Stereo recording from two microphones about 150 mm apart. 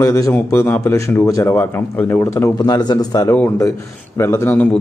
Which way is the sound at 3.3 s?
15° left (ahead or behind).